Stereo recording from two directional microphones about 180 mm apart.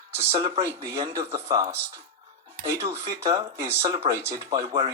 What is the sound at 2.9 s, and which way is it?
Speech, 20° right (ahead or behind).